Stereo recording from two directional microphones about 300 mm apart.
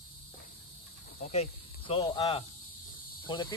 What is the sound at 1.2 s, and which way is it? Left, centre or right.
Cricket, left.